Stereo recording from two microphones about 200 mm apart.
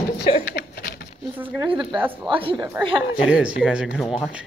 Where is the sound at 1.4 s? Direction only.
5° right (ahead or behind).